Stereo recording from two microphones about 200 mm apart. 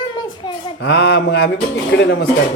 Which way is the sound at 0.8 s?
60° left (ahead or behind).